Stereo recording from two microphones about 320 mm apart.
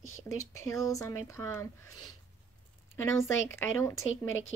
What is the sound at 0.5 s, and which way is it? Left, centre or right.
Speech, centre.